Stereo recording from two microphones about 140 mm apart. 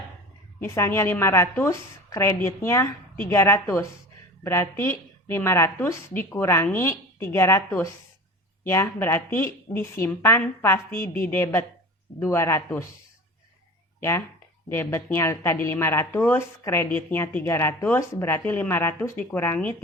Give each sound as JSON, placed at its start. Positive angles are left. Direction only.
{"t": 0.6, "sound": "a woman's voice", "side_deg": 20}
{"t": 14.0, "sound": "a woman's voice", "side_deg": 20}